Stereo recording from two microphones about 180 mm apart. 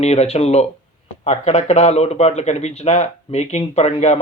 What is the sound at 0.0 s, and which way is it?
Speech, 35° left (ahead or behind).